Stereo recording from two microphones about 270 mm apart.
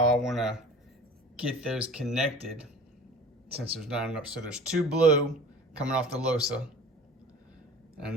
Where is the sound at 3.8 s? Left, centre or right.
Centre.